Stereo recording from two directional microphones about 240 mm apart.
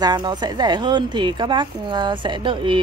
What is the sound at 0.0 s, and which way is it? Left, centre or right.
Speech, centre.